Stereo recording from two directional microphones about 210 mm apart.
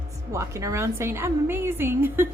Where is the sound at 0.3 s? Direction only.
15° right (ahead or behind).